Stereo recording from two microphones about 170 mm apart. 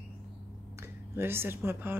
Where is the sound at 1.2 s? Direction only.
15° right (ahead or behind).